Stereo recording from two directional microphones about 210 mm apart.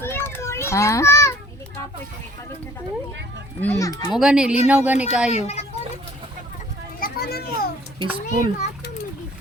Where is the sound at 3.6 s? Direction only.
15° left (ahead or behind).